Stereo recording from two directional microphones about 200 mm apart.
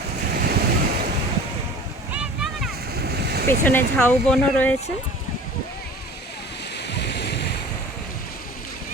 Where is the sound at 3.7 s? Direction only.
10° left (ahead or behind).